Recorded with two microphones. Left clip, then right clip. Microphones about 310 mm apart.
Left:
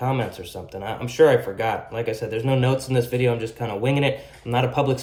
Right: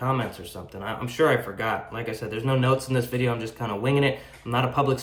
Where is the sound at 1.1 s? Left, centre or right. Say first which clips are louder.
Left 6 dB; left.